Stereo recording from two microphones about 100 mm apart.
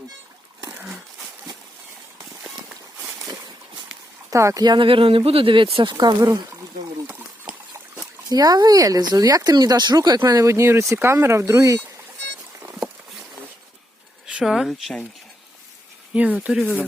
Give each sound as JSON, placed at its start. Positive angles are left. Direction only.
{"t": 4.3, "sound": "speech", "side_deg": -30}
{"t": 4.6, "sound": "speech", "side_deg": -45}
{"t": 4.9, "sound": "speech", "side_deg": -65}
{"t": 5.7, "sound": "speech", "side_deg": -55}
{"t": 8.3, "sound": "speech", "side_deg": -40}
{"t": 14.3, "sound": "speech", "side_deg": -5}
{"t": 16.1, "sound": "speech", "side_deg": -15}